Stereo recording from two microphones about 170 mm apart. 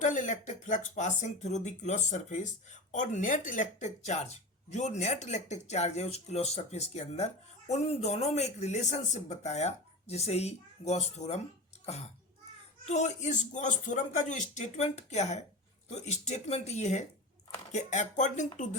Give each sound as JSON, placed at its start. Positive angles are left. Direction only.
{"t": 0.0, "sound": "speech", "side_deg": 50}
{"t": 12.8, "sound": "speech", "side_deg": 45}